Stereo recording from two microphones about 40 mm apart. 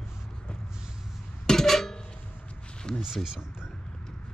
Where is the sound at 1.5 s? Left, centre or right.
Centre.